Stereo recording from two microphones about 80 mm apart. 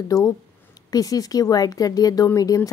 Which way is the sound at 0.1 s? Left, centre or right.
Left.